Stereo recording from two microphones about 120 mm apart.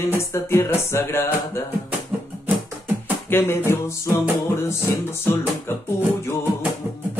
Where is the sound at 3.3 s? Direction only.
20° left (ahead or behind).